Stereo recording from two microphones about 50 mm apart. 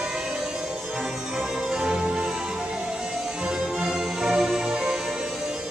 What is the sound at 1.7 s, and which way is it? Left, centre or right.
Music, centre.